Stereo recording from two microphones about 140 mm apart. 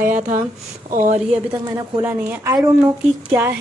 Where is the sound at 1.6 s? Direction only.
30° right (ahead or behind).